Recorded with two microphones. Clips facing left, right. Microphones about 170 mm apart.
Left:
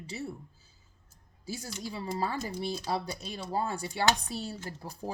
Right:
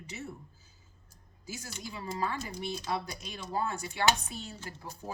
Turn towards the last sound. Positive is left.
turn(degrees=35)  # may be behind; listen again after turning